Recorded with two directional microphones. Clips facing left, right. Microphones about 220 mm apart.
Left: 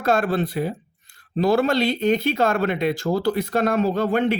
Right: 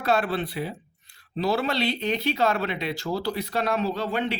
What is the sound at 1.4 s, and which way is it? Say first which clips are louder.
Speech: left 6 dB; 50° left (ahead or behind).